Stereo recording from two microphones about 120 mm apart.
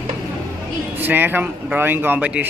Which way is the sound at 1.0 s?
15° right (ahead or behind).